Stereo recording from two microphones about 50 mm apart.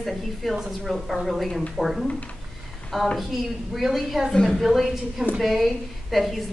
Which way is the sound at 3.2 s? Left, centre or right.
Centre.